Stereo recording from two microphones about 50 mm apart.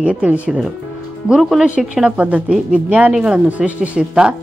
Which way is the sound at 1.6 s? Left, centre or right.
Right.